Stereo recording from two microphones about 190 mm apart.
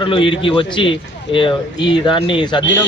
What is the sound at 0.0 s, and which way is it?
Speech, 25° left (ahead or behind).